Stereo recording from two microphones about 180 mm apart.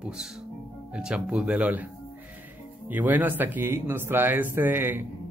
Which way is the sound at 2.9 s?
10° right (ahead or behind).